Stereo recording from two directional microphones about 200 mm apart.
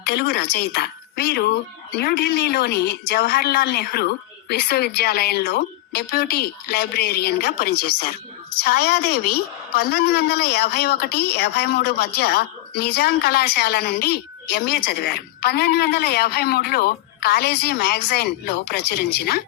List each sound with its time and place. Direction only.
0.0 s a woman's voice: 50° left (ahead or behind)